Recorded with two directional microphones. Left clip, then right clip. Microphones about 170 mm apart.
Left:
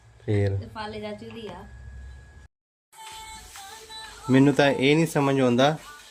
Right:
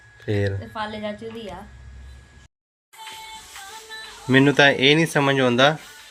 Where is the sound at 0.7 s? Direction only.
35° right (ahead or behind).